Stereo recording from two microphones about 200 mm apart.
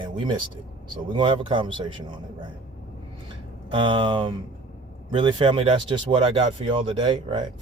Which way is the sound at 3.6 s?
25° right (ahead or behind).